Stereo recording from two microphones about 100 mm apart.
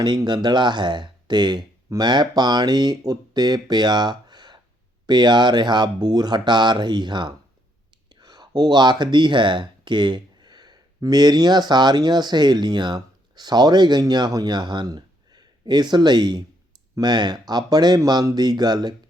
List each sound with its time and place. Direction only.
0.2 s speech: 45° right (ahead or behind)